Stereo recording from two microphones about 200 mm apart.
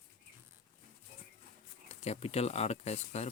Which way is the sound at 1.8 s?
30° left (ahead or behind).